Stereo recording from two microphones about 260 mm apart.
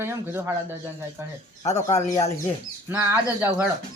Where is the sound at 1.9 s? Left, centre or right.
Left.